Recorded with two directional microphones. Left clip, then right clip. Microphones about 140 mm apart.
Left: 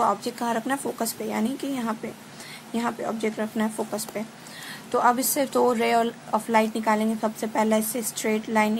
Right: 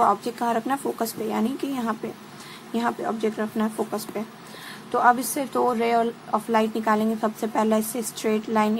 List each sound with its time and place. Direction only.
0.0 s a woman's voice: 15° left (ahead or behind)